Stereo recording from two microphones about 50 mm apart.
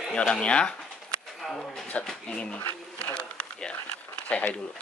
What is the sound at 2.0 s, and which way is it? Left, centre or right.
Speech, left.